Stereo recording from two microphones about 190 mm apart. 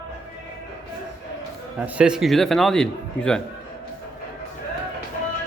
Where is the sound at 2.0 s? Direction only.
5° right (ahead or behind).